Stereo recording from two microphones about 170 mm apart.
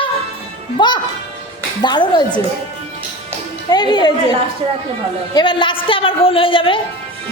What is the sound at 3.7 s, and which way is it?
Speech, 25° left (ahead or behind).